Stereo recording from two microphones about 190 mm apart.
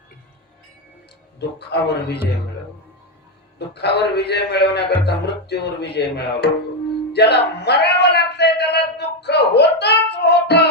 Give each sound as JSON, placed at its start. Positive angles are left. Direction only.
{"t": 1.4, "sound": "speech", "side_deg": 60}
{"t": 3.8, "sound": "speech", "side_deg": 60}
{"t": 7.1, "sound": "music", "side_deg": 60}